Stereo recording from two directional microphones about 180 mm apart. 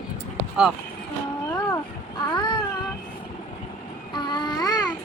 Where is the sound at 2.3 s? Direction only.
25° left (ahead or behind).